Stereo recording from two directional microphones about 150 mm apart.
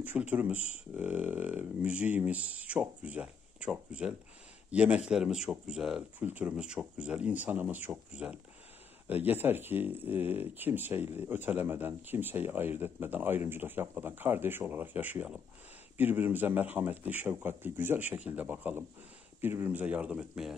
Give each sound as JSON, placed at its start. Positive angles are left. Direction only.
{"t": 0.0, "sound": "speech", "side_deg": -10}